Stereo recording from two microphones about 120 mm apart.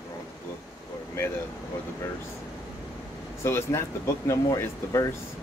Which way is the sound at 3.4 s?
20° left (ahead or behind).